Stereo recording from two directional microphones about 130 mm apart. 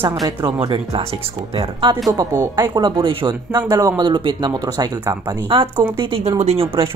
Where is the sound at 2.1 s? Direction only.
30° right (ahead or behind).